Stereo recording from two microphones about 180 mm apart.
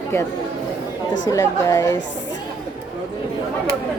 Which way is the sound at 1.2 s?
20° left (ahead or behind).